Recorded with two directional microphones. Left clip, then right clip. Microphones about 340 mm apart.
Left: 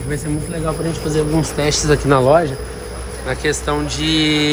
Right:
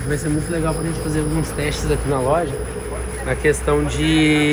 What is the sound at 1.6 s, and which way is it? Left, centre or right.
Speech, left.